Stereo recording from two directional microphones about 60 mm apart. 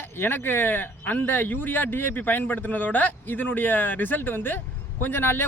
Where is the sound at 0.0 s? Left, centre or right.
Left.